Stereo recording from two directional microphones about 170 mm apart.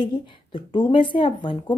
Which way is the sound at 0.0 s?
30° left (ahead or behind).